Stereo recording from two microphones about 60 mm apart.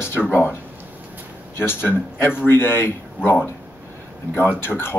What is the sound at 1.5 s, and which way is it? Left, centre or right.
Speech, left.